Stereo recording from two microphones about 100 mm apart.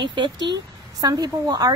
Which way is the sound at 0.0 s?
50° right (ahead or behind).